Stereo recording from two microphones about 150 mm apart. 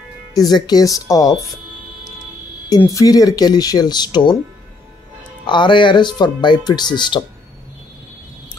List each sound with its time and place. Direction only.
0.3 s speech: 25° left (ahead or behind)
2.8 s speech: 20° left (ahead or behind)
5.5 s speech: 30° left (ahead or behind)